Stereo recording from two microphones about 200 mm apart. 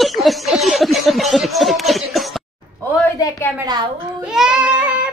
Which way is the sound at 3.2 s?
15° left (ahead or behind).